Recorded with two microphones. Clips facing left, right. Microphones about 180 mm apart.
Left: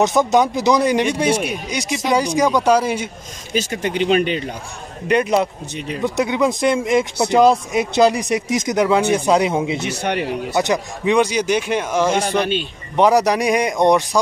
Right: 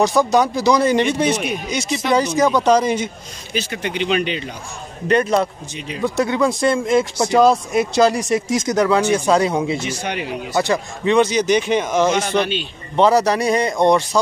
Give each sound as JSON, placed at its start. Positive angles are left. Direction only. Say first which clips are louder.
{"t": 0.0, "sound": "speech", "louder": "even", "side_deg": 20}
{"t": 3.5, "sound": "speech", "louder": "left 3 dB", "side_deg": 40}
{"t": 5.0, "sound": "speech", "louder": "even", "side_deg": 10}
{"t": 9.8, "sound": "speech", "louder": "left 3 dB", "side_deg": 65}
{"t": 10.5, "sound": "speech", "louder": "right 1 dB", "side_deg": 15}
{"t": 12.2, "sound": "speech", "louder": "even", "side_deg": 35}
{"t": 12.9, "sound": "speech", "louder": "even", "side_deg": 15}